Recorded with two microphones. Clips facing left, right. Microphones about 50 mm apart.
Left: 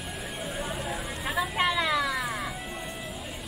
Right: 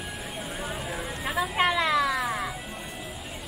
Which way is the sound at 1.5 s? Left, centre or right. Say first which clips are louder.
Right 3 dB; centre.